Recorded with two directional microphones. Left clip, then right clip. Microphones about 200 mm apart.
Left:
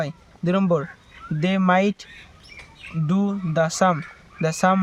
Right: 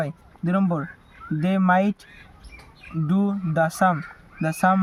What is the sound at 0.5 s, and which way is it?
Speech, 45° left (ahead or behind).